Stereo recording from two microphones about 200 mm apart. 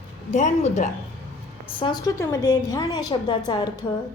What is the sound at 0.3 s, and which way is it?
Speech, 35° left (ahead or behind).